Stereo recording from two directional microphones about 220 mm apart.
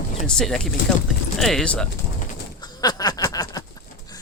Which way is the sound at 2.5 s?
20° left (ahead or behind).